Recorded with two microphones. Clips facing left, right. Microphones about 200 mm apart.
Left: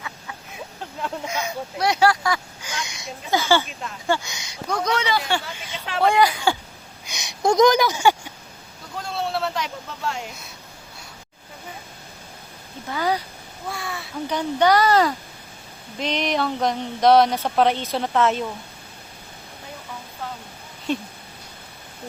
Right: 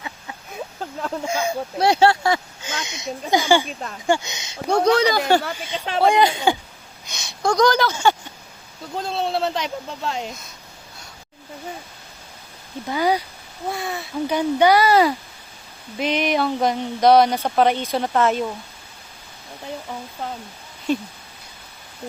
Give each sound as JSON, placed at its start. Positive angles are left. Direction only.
{"t": 1.0, "sound": "speech", "side_deg": -30}
{"t": 7.1, "sound": "speech", "side_deg": 20}
{"t": 9.0, "sound": "speech", "side_deg": -20}
{"t": 12.9, "sound": "speech", "side_deg": -15}
{"t": 14.3, "sound": "speech", "side_deg": -10}
{"t": 20.9, "sound": "speech", "side_deg": 0}